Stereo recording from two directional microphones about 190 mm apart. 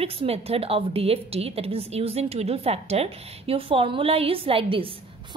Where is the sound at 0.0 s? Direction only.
30° right (ahead or behind).